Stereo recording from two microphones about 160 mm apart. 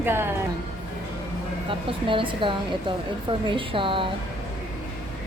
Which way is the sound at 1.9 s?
30° right (ahead or behind).